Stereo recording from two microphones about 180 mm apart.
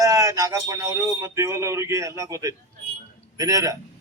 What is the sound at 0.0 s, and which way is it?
Speech, 20° right (ahead or behind).